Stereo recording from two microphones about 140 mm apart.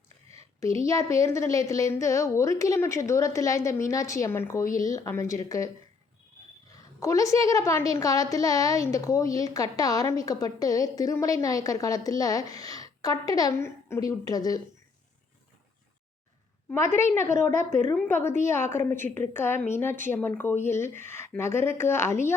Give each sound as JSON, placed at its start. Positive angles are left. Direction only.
{"t": 0.6, "sound": "a woman's voice", "side_deg": 20}
{"t": 7.0, "sound": "a woman's voice", "side_deg": 25}
{"t": 16.6, "sound": "a woman's voice", "side_deg": 20}
{"t": 17.7, "sound": "a woman's voice", "side_deg": -60}
{"t": 17.9, "sound": "a woman's voice", "side_deg": 10}